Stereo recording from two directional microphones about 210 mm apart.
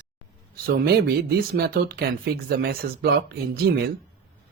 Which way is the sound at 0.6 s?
45° right (ahead or behind).